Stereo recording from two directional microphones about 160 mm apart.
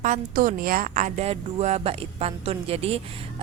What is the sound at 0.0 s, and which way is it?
A woman's voice, 60° right (ahead or behind).